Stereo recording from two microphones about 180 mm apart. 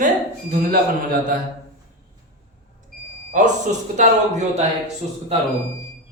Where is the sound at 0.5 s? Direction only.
55° right (ahead or behind).